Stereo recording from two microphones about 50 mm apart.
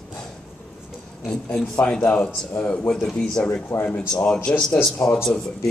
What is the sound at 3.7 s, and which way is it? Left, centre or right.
Speech, left.